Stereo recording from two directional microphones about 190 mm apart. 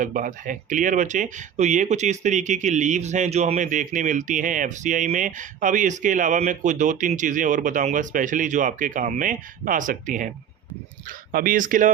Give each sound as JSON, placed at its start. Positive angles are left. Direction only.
{"t": 0.0, "sound": "speech", "side_deg": -45}